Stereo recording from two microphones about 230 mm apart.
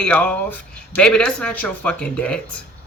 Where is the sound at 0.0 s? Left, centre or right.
Centre.